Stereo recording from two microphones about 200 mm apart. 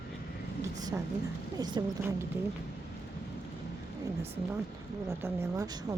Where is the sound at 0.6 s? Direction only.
15° right (ahead or behind).